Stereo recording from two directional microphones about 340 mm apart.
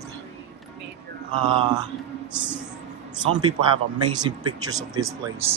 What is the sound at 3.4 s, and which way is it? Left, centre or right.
Speech, centre.